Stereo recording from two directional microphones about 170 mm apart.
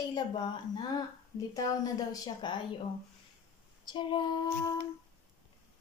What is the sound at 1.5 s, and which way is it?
A woman's voice, 20° left (ahead or behind).